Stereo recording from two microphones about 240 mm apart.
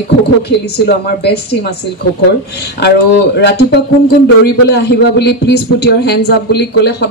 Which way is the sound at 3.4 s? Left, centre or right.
Left.